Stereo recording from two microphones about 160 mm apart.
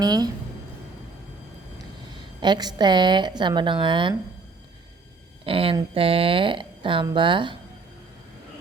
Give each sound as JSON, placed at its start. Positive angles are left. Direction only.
{"t": 0.0, "sound": "a woman's voice", "side_deg": -25}
{"t": 2.4, "sound": "a woman's voice", "side_deg": -25}
{"t": 5.5, "sound": "speech", "side_deg": -35}